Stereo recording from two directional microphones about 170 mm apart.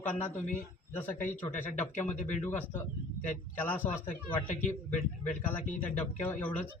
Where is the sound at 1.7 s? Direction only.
50° left (ahead or behind).